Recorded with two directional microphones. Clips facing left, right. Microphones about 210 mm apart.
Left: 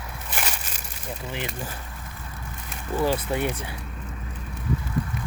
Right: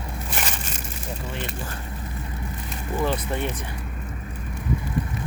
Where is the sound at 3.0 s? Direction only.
5° left (ahead or behind).